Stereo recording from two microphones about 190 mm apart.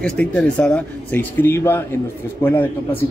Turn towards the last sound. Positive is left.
turn(degrees=10)  # may be behind; listen again after turning